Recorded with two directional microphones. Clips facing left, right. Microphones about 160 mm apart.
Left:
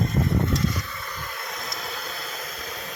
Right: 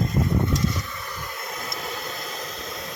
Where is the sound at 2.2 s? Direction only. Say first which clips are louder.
Right 2 dB; 35° right (ahead or behind).